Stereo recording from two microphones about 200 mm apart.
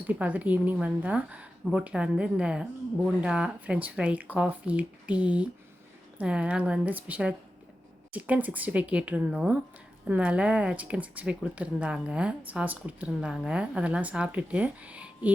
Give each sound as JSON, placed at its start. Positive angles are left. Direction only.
{"t": 0.1, "sound": "a woman's voice", "side_deg": -5}